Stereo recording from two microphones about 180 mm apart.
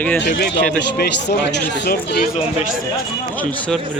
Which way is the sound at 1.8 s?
60° left (ahead or behind).